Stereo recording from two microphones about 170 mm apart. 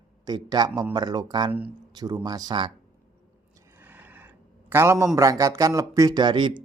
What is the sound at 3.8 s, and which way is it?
A man's voice, 10° right (ahead or behind).